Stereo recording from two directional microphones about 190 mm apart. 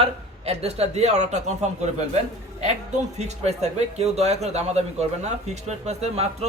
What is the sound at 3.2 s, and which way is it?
Speech, 35° right (ahead or behind).